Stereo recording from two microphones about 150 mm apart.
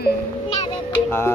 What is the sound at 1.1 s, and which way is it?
Speech, 15° left (ahead or behind).